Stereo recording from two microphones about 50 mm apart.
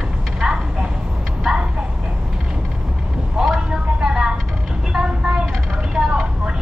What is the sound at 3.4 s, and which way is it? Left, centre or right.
Vehicle, centre.